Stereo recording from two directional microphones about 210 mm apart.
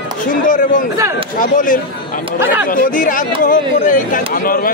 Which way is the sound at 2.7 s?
40° left (ahead or behind).